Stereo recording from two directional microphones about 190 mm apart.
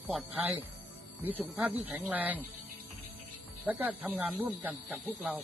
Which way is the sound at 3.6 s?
10° right (ahead or behind).